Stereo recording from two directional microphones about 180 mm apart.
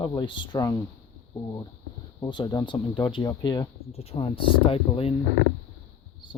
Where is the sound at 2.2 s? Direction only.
25° left (ahead or behind).